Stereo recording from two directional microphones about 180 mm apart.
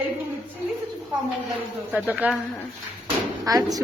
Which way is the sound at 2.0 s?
10° right (ahead or behind).